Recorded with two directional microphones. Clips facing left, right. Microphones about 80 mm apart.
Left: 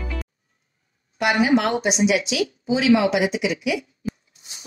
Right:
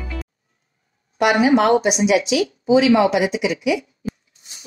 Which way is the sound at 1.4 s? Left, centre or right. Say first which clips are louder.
Right 4 dB; right.